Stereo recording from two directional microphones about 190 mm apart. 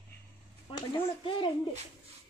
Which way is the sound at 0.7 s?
25° left (ahead or behind).